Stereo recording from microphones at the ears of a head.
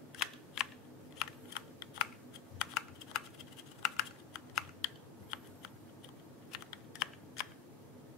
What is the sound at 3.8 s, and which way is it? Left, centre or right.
Computer keyboard, left.